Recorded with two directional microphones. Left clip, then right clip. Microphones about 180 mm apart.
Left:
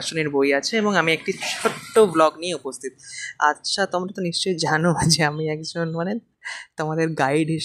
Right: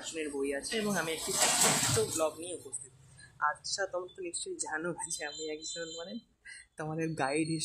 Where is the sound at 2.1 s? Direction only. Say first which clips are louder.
Left 15 dB; 40° left (ahead or behind).